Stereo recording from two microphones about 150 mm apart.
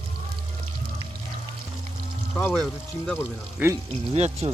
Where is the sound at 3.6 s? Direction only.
10° right (ahead or behind).